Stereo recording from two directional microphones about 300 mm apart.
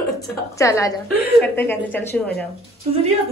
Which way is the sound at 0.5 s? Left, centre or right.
Centre.